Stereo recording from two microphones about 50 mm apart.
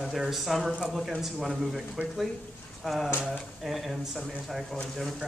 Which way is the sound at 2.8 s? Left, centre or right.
Centre.